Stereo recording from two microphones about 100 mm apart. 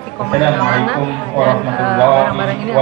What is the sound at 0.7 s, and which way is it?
Speech, 5° left (ahead or behind).